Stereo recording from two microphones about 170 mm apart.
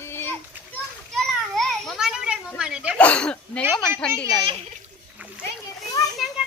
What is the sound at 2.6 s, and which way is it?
Speech, 5° right (ahead or behind).